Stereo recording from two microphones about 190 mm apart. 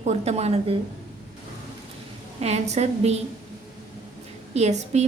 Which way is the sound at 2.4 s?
35° right (ahead or behind).